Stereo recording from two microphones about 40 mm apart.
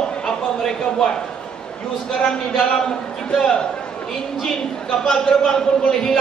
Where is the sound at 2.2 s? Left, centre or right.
Centre.